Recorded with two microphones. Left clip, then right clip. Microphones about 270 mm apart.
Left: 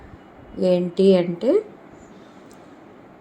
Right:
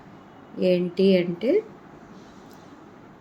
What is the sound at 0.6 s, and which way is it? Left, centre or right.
Speech, centre.